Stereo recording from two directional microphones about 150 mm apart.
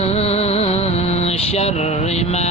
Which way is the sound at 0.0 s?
45° left (ahead or behind).